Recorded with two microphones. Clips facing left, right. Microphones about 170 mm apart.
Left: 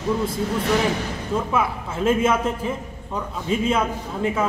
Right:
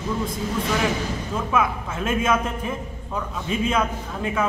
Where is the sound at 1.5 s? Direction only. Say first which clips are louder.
Even; 30° left (ahead or behind).